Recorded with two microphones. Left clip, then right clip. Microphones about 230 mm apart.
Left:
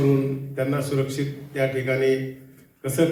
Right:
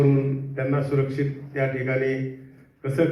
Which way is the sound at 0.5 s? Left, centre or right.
Left.